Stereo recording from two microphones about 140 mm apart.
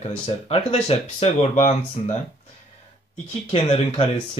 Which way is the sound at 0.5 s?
50° left (ahead or behind).